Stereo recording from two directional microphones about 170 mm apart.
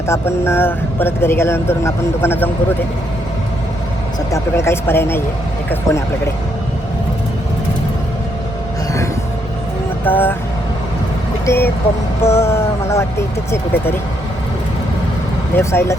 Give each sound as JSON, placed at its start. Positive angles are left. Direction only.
{"t": 0.1, "sound": "speech", "side_deg": 15}
{"t": 4.3, "sound": "speech", "side_deg": 15}
{"t": 10.0, "sound": "speech", "side_deg": 10}
{"t": 11.4, "sound": "speech", "side_deg": 15}
{"t": 15.5, "sound": "speech", "side_deg": 15}